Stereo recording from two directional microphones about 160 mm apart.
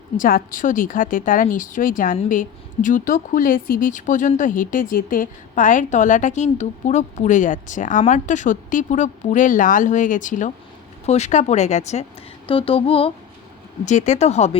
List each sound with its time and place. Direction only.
0.2 s a woman's voice: 60° left (ahead or behind); by 12.0 s 45° left (ahead or behind)
12.5 s mantra: 35° left (ahead or behind)
13.8 s a woman's voice: 50° left (ahead or behind)